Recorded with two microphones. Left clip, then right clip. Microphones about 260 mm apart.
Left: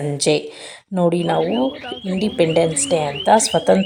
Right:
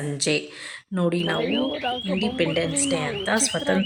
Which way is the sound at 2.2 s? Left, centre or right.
Centre.